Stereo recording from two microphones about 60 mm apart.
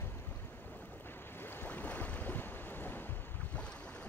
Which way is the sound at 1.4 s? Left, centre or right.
Left.